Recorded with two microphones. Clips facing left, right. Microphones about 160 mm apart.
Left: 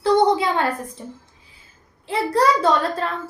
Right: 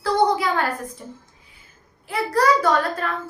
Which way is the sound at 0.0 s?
25° left (ahead or behind).